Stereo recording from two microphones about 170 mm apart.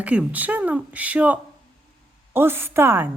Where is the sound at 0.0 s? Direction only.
10° right (ahead or behind).